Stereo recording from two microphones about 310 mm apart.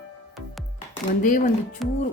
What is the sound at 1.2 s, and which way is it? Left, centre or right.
Speech, left.